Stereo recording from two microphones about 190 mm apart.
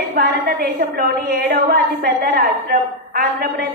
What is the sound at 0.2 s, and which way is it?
Speech, 50° right (ahead or behind).